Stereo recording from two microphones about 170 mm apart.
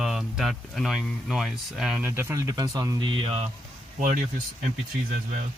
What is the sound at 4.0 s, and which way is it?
Speech, 50° right (ahead or behind).